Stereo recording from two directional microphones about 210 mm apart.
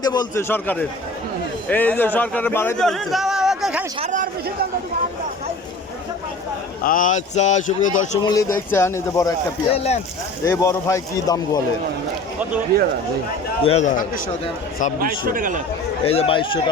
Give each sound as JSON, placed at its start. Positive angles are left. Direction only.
{"t": 0.0, "sound": "a man's voice", "side_deg": 20}
{"t": 4.0, "sound": "speech", "side_deg": -40}
{"t": 6.8, "sound": "speech", "side_deg": 40}
{"t": 8.2, "sound": "a man's voice", "side_deg": 15}
{"t": 9.7, "sound": "speech", "side_deg": 30}
{"t": 10.4, "sound": "a man's voice", "side_deg": 15}
{"t": 12.7, "sound": "speech", "side_deg": -45}
{"t": 13.7, "sound": "speech", "side_deg": 35}
{"t": 15.0, "sound": "speech", "side_deg": -40}
{"t": 16.0, "sound": "speech", "side_deg": 25}